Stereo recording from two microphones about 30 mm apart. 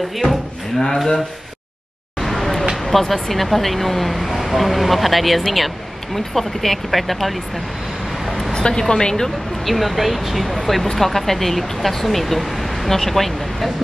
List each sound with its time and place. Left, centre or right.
0.2 s speech: centre
2.1 s vehicle: centre
2.8 s speech: centre
8.5 s speech: left
9.7 s speech: centre